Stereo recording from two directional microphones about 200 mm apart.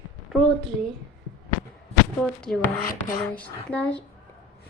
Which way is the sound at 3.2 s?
5° left (ahead or behind).